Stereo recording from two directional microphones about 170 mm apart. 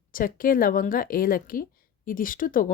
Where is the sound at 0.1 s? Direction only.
55° left (ahead or behind).